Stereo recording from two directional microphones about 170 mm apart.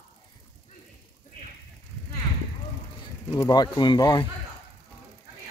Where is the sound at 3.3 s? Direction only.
25° left (ahead or behind).